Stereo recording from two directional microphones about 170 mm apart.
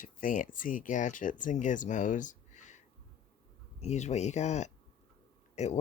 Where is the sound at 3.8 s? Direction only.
40° left (ahead or behind).